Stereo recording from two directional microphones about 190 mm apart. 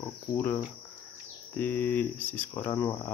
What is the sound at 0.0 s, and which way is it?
Cricket, 10° left (ahead or behind).